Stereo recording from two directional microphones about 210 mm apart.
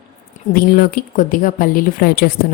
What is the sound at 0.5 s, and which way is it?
Speech, 45° left (ahead or behind).